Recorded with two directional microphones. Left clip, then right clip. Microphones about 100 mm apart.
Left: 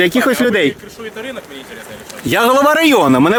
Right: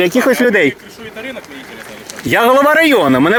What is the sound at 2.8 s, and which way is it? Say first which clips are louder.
Speech: even; 90° left.